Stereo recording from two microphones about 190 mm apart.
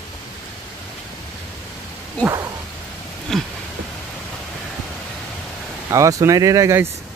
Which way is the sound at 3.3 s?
Centre (ahead or behind).